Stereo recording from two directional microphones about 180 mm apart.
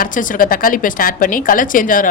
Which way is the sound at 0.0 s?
45° left (ahead or behind).